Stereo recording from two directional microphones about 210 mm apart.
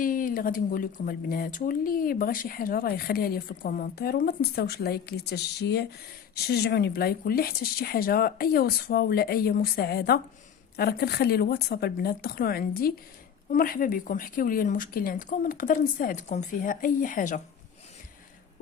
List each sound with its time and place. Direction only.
0.0 s a woman's voice: 40° left (ahead or behind)